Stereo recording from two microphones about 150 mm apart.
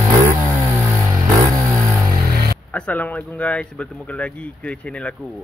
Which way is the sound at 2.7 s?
10° left (ahead or behind).